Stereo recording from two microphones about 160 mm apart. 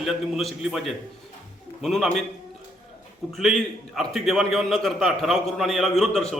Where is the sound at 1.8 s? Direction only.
Centre (ahead or behind).